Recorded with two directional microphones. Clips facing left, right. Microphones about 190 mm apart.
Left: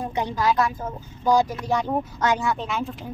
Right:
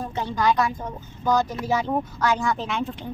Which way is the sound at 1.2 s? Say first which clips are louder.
Left 2 dB; 10° left (ahead or behind).